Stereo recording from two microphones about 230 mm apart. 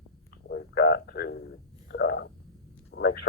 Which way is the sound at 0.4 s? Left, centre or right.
Left.